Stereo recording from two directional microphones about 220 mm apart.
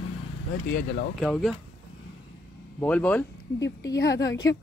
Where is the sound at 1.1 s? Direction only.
Centre (ahead or behind).